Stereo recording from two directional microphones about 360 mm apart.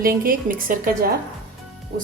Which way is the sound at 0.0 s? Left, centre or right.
Right.